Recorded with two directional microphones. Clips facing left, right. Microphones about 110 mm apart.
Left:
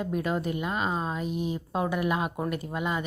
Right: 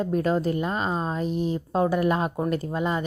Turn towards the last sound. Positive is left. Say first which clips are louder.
# right 4 dB
turn(degrees=-35)  # may be behind; listen again after turning